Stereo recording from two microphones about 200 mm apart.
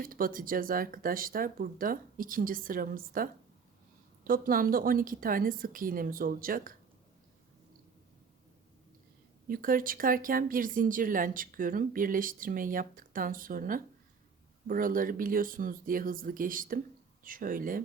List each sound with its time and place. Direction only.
0.0 s speech: 45° right (ahead or behind)
9.5 s speech: 45° right (ahead or behind)